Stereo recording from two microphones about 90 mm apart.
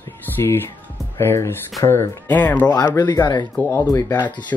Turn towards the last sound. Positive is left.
turn(degrees=15)  # may be behind; listen again after turning